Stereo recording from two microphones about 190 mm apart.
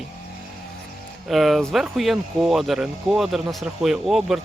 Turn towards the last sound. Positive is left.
turn(degrees=0)  # may be behind; listen again after turning